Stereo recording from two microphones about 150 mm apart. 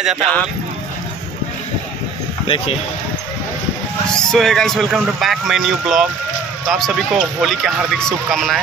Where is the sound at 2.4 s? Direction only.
35° left (ahead or behind).